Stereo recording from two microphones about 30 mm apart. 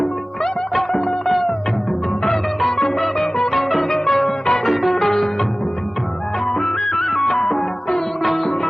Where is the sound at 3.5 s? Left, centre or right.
Centre.